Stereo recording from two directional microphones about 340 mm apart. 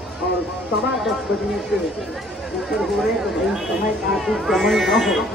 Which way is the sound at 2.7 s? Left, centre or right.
Centre.